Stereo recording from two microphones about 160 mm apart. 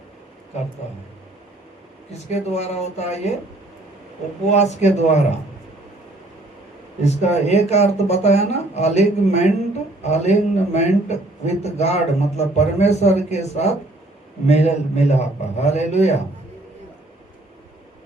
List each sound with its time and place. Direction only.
2.3 s a man's voice: 45° left (ahead or behind)
4.4 s a man's voice: 45° left (ahead or behind)
7.0 s a man's voice: 45° left (ahead or behind)